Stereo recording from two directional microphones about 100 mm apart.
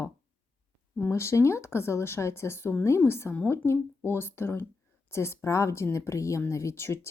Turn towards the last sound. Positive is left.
turn(degrees=25)  # may be behind; listen again after turning